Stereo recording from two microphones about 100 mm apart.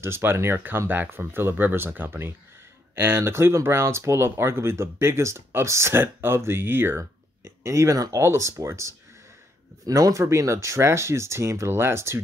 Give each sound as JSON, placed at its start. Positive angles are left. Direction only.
{"t": 0.0, "sound": "speech", "side_deg": -25}